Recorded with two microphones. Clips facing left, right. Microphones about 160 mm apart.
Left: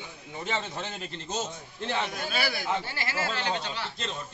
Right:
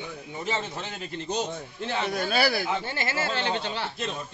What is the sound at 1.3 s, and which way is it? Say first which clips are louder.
Speech: right 4 dB; 15° right (ahead or behind).